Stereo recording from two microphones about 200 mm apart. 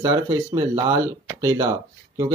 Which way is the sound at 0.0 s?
15° right (ahead or behind).